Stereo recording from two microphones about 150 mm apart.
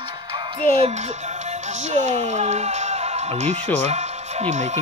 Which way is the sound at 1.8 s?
50° right (ahead or behind).